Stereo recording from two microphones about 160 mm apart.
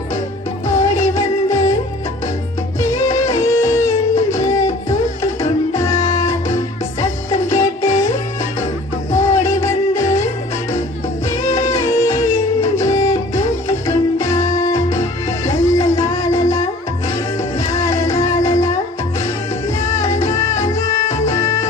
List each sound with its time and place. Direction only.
0.7 s music: 20° left (ahead or behind)
2.8 s music: 15° left (ahead or behind)
9.1 s music: 20° left (ahead or behind)
11.3 s music: 20° left (ahead or behind)